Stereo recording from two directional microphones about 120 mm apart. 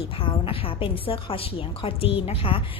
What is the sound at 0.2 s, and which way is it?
A woman's voice, 50° left (ahead or behind).